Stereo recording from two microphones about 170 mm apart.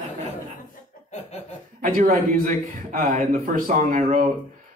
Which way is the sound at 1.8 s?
55° right (ahead or behind).